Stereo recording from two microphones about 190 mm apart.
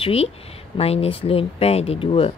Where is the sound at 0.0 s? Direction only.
30° left (ahead or behind).